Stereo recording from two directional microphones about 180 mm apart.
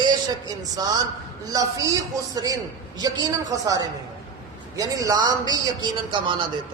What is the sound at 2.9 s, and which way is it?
A man's voice, 20° right (ahead or behind).